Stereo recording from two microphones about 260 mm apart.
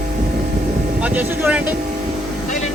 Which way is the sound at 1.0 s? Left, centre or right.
Centre.